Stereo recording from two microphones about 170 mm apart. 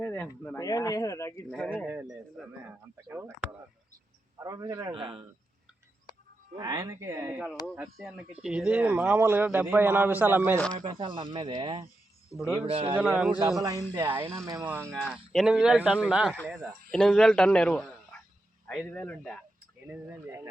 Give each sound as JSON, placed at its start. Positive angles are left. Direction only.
{"t": 0.0, "sound": "speech", "side_deg": 5}
{"t": 1.5, "sound": "speech", "side_deg": 5}
{"t": 1.7, "sound": "a man's voice", "side_deg": -5}
{"t": 3.1, "sound": "a man's voice", "side_deg": -15}
{"t": 4.4, "sound": "a man's voice", "side_deg": -20}
{"t": 4.9, "sound": "speech", "side_deg": -30}
{"t": 6.6, "sound": "a man's voice", "side_deg": -20}
{"t": 7.8, "sound": "a man's voice", "side_deg": -5}
{"t": 10.8, "sound": "speech", "side_deg": -30}
{"t": 13.1, "sound": "a man's voice", "side_deg": -5}
{"t": 13.6, "sound": "a man's voice", "side_deg": -20}
{"t": 14.9, "sound": "a man's voice", "side_deg": 5}
{"t": 19.9, "sound": "a man's voice", "side_deg": -15}